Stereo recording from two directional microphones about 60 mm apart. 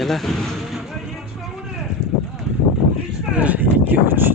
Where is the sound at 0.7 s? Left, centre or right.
Centre.